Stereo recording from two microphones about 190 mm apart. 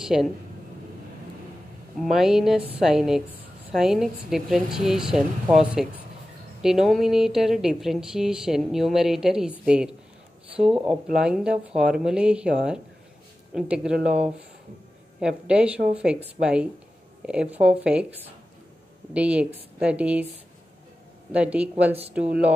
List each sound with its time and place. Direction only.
0.0 s speech: centre (ahead or behind)
2.0 s speech: centre (ahead or behind)
19.1 s speech: 5° right (ahead or behind)
21.3 s speech: 5° right (ahead or behind)